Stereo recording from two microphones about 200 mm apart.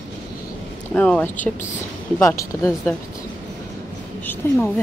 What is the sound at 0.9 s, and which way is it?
Speech, 5° left (ahead or behind).